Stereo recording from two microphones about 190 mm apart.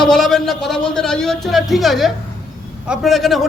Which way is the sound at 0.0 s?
Centre (ahead or behind).